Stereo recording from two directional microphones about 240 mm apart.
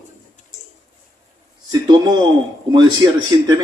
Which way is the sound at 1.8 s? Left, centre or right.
Centre.